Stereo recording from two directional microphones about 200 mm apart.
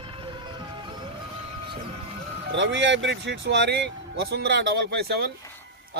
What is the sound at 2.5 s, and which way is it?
Speech, 65° right (ahead or behind).